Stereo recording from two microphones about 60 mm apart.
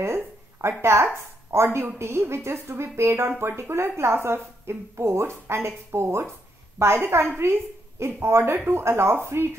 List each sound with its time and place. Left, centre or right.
0.0 s a sound: right
0.8 s a woman's voice: right
7.3 s a woman's voice: right